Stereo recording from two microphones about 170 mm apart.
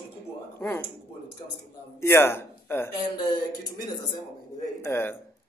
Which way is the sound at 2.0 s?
15° left (ahead or behind).